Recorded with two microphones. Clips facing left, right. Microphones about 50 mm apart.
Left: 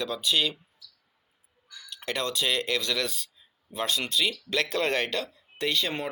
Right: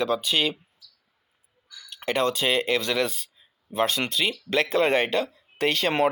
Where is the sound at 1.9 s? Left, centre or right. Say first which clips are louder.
Right 7 dB; right.